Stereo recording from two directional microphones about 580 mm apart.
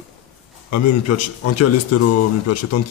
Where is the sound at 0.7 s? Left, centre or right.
Left.